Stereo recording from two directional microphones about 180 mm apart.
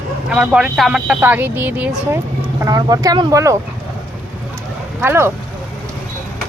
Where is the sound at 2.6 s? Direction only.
20° right (ahead or behind).